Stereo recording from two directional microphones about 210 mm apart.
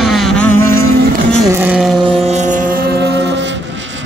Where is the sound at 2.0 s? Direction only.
30° right (ahead or behind); by 3.4 s 55° right (ahead or behind).